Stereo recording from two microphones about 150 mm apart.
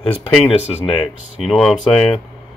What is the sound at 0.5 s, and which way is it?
Speech, 40° left (ahead or behind).